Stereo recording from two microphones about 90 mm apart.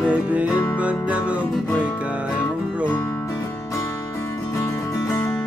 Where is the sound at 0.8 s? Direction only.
15° right (ahead or behind).